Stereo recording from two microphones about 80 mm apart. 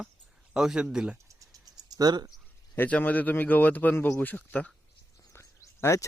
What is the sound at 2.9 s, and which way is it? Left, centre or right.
Speech, left.